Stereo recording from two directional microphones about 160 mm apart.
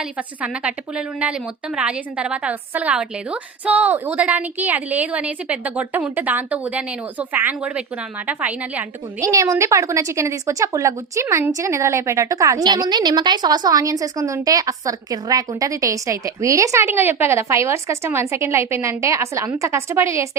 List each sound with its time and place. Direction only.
0.4 s a woman's voice: 5° right (ahead or behind)
9.2 s a woman's voice: 20° right (ahead or behind)